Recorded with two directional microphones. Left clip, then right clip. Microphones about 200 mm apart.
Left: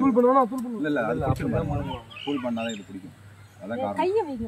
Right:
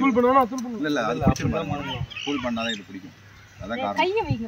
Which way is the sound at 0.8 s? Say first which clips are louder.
Right 2 dB; 5° right (ahead or behind).